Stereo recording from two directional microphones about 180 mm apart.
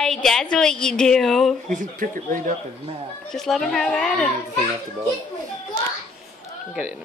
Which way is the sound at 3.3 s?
Centre (ahead or behind).